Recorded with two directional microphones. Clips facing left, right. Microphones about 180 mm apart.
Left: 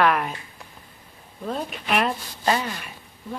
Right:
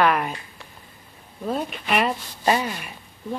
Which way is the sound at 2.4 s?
15° right (ahead or behind).